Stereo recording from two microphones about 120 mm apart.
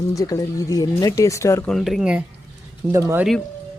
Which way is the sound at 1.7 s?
Centre (ahead or behind).